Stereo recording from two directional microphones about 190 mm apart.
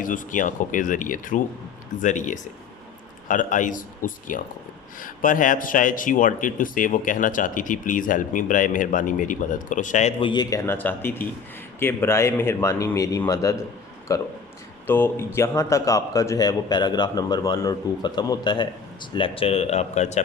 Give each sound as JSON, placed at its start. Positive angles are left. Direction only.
{"t": 0.0, "sound": "a man's voice", "side_deg": 45}